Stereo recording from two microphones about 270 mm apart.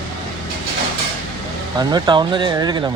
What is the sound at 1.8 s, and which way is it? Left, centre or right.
A man's voice, centre.